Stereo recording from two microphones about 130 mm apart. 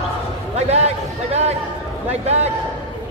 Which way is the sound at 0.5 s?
55° right (ahead or behind).